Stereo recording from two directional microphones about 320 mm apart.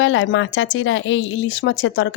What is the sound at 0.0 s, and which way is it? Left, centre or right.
Speech, left.